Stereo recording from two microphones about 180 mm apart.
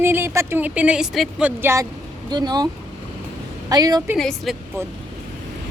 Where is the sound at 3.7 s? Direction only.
20° right (ahead or behind).